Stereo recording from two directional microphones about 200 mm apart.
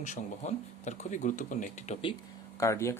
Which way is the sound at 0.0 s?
35° left (ahead or behind).